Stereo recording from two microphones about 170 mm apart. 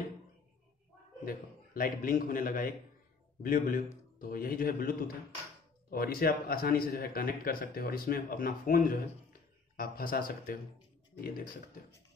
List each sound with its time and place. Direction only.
1.2 s a man's voice: 55° left (ahead or behind)